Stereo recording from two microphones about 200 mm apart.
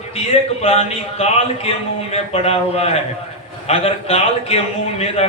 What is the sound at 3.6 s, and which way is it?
Speech, 30° left (ahead or behind).